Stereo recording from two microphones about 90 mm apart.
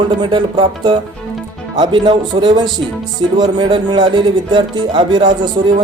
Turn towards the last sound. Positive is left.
turn(degrees=-60)  # may be behind; listen again after turning